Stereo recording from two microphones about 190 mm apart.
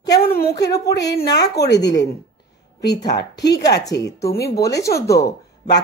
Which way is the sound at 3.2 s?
60° left (ahead or behind).